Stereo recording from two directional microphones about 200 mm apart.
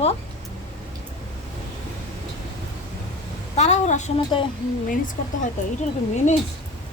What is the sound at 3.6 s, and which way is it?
Speech, 35° left (ahead or behind).